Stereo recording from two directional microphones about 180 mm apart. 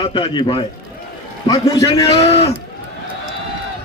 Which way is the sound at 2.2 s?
35° left (ahead or behind).